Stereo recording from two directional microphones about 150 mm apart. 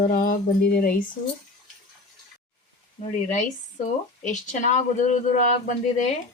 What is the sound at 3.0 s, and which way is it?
Speech, 55° left (ahead or behind).